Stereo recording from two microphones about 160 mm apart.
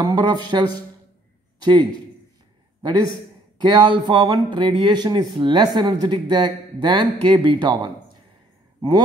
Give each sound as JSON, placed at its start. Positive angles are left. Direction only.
{"t": 0.0, "sound": "a man's voice", "side_deg": -25}